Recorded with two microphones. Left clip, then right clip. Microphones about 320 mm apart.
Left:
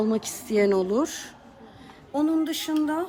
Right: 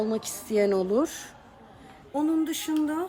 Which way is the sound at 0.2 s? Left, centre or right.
Centre.